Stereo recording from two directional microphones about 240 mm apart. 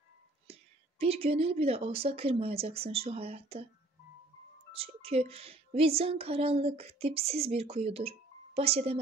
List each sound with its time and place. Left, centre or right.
0.5 s speech: right
4.7 s a woman's voice: right